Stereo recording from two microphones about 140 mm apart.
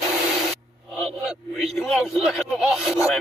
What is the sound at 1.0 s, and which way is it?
Vehicle, 5° right (ahead or behind).